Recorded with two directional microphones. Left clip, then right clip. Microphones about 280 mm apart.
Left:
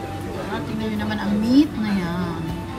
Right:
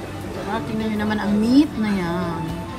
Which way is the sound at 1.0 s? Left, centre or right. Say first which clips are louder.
Right 4 dB; centre.